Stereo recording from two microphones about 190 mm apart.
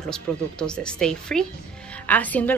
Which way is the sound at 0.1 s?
5° left (ahead or behind).